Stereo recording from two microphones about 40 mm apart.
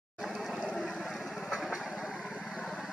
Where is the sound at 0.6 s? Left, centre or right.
Centre.